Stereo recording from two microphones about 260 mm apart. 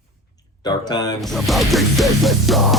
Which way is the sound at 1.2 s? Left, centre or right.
Centre.